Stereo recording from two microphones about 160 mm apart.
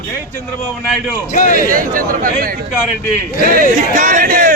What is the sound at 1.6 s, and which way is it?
Speech, 60° right (ahead or behind).